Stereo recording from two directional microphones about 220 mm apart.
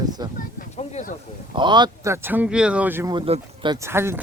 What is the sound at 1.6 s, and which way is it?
Speech, 20° right (ahead or behind).